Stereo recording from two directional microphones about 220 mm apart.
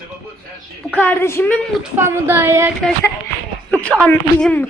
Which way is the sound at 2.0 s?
10° right (ahead or behind).